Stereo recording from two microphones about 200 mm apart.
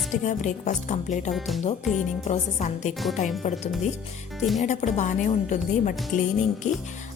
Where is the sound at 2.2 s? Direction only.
35° left (ahead or behind).